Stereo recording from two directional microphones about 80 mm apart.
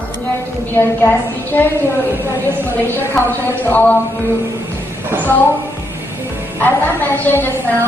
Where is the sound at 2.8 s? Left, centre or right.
Left.